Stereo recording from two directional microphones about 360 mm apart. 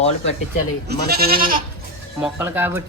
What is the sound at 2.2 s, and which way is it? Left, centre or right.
Speech, centre.